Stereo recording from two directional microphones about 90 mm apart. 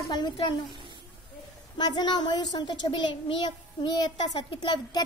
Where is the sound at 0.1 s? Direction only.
55° left (ahead or behind).